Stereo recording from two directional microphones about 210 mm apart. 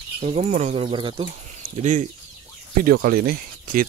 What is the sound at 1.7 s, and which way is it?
Speech, 35° right (ahead or behind).